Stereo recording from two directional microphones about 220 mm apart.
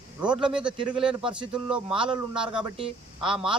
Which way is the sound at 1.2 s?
20° right (ahead or behind).